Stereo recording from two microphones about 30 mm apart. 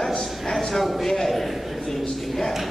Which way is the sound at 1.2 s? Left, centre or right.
Centre.